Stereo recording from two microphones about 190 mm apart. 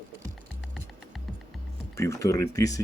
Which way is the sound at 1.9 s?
15° left (ahead or behind).